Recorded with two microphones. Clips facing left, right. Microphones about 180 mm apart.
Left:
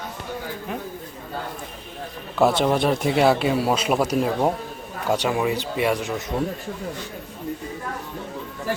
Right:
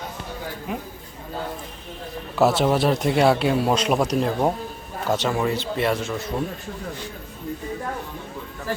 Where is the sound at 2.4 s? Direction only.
5° right (ahead or behind); by 6.3 s 15° left (ahead or behind).